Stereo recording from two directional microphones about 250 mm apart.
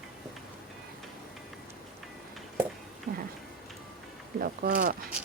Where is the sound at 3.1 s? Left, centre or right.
Right.